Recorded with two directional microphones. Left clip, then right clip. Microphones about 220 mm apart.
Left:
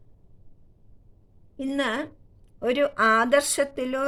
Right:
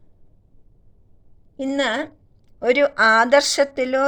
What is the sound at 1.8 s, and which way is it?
Speech, centre (ahead or behind).